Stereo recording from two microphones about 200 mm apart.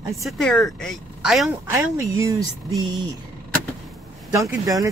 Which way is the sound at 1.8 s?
15° right (ahead or behind).